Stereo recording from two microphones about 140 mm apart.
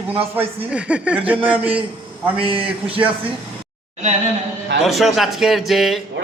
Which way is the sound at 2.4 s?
40° right (ahead or behind).